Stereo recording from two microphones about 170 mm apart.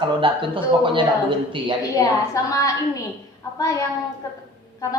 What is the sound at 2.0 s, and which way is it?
A woman's voice, 20° left (ahead or behind).